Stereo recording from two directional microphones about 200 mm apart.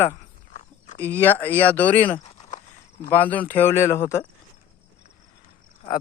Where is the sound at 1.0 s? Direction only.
10° left (ahead or behind).